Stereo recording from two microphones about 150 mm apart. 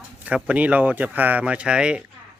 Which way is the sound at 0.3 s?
10° right (ahead or behind).